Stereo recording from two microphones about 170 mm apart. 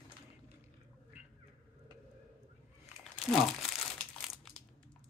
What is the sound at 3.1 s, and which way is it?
Crumpling, 5° left (ahead or behind).